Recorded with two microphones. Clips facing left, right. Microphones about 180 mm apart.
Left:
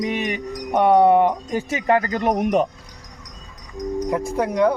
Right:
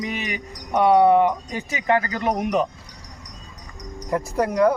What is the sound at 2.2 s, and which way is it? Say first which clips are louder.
Speech: left 3 dB; 55° left (ahead or behind).